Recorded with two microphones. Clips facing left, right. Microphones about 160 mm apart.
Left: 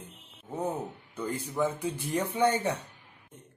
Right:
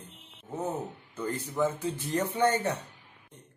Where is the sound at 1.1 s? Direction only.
10° left (ahead or behind).